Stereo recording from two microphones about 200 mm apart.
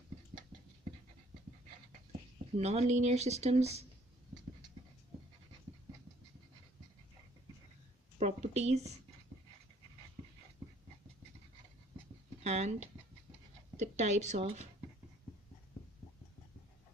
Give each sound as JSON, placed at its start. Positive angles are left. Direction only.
{"t": 2.6, "sound": "speech", "side_deg": -35}
{"t": 8.2, "sound": "speech", "side_deg": -35}
{"t": 12.4, "sound": "speech", "side_deg": -35}